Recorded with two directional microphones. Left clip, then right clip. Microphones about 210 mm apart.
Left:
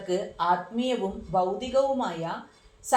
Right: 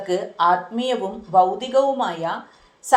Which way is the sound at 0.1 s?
20° right (ahead or behind).